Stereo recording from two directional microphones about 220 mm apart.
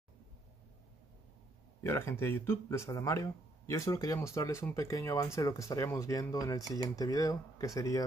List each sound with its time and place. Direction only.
1.8 s speech: 10° left (ahead or behind)